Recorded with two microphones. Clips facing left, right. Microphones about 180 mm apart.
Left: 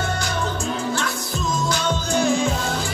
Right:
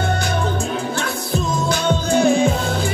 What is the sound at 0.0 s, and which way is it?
Music, 55° right (ahead or behind).